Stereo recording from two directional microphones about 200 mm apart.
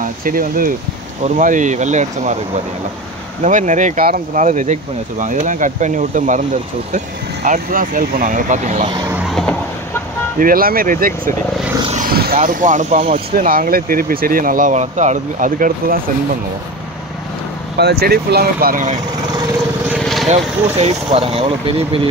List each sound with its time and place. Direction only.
0.0 s speech: 45° right (ahead or behind)
3.4 s speech: 40° right (ahead or behind)
7.4 s speech: 40° right (ahead or behind)
8.9 s a sound: 15° right (ahead or behind)
9.3 s a sound: centre (ahead or behind)
10.4 s speech: 45° right (ahead or behind)
11.9 s vehicle: 45° right (ahead or behind)
12.4 s speech: 40° right (ahead or behind)
13.4 s speech: 45° right (ahead or behind)
17.7 s speech: 55° right (ahead or behind)
20.0 s vehicle: centre (ahead or behind)
20.2 s speech: 30° right (ahead or behind)